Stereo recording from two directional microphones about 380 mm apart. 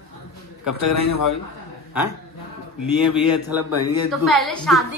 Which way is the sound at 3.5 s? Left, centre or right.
Centre.